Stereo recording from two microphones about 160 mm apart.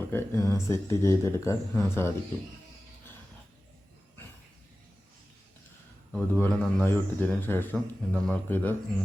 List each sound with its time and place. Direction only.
0.1 s a man's voice: 15° left (ahead or behind)
6.1 s a man's voice: 5° left (ahead or behind)